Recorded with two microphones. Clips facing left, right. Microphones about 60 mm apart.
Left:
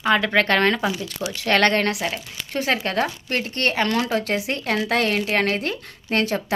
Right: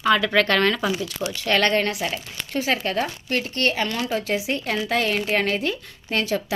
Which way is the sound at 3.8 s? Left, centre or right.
Left.